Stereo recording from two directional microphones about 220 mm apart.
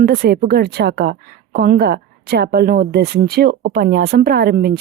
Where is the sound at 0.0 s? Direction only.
45° right (ahead or behind).